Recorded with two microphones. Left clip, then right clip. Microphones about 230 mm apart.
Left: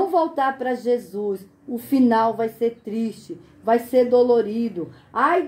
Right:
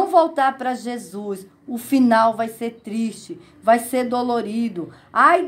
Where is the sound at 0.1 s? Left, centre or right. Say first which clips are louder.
Right 4 dB; right.